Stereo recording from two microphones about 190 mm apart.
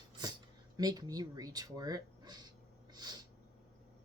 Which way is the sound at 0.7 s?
20° right (ahead or behind).